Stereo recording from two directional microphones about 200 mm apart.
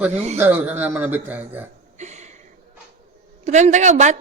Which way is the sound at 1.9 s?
35° right (ahead or behind).